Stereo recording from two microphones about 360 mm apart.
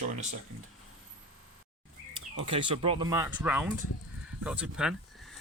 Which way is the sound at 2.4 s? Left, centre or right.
Centre.